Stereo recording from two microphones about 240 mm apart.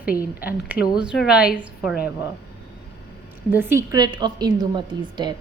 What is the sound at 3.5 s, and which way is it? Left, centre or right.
A woman's voice, centre.